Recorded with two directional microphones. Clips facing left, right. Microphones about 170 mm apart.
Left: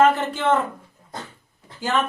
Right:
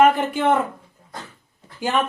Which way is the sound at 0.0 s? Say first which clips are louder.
Right 2 dB; 15° right (ahead or behind).